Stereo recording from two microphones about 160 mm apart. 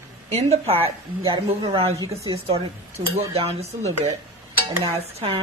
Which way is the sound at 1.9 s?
20° right (ahead or behind).